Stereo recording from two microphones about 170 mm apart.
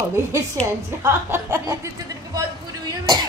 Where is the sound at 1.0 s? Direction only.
15° right (ahead or behind).